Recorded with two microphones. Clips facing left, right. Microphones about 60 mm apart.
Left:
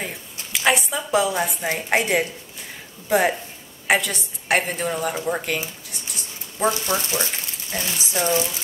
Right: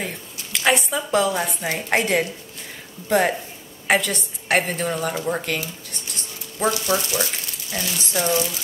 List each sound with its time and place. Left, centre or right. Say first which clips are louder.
0.0 s a woman's voice: right 1 dB; centre
5.9 s dog: right 1 dB; centre
6.9 s speech: right 2 dB; left
7.7 s speech: right 1 dB; centre